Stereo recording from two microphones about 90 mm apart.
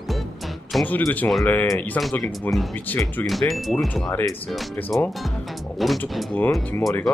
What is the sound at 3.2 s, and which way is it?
Speech, centre (ahead or behind).